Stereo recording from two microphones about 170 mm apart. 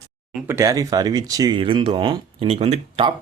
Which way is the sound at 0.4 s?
15° right (ahead or behind).